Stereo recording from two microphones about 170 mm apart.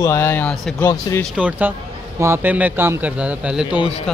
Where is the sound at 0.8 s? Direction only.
20° left (ahead or behind).